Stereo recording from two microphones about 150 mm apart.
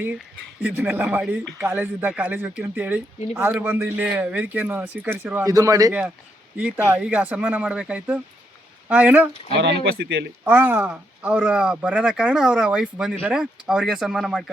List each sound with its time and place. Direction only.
0.6 s speech: 10° right (ahead or behind)
6.6 s speech: 10° right (ahead or behind)
9.7 s speech: 90° right
10.4 s speech: 15° right (ahead or behind)